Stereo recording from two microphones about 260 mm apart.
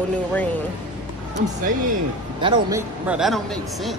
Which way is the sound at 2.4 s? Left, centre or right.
Centre.